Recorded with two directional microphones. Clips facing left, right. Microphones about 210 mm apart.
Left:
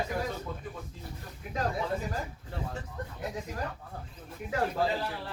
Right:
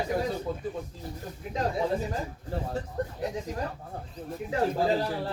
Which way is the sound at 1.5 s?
25° right (ahead or behind).